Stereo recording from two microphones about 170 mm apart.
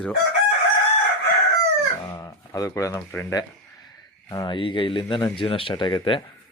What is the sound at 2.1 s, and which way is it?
Speech, 20° left (ahead or behind).